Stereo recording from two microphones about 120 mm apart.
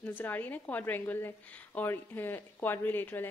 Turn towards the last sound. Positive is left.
turn(degrees=15)  # may be behind; listen again after turning